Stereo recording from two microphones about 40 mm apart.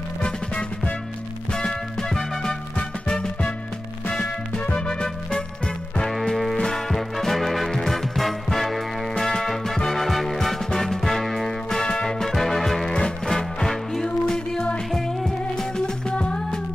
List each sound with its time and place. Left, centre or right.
1.5 s music: centre
3.1 s music: left
4.7 s music: centre
6.1 s music: centre
11.8 s music: left; by 12.9 s centre
12.9 s music: centre
14.9 s music: centre
16.1 s music: left